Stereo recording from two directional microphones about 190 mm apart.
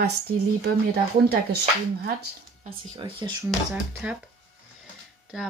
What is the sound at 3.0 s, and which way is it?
Speech, 25° right (ahead or behind).